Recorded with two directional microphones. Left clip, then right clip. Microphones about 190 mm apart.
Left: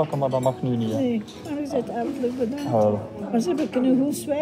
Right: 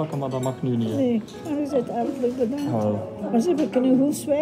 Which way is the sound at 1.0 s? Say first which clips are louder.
Right 2 dB; 15° right (ahead or behind).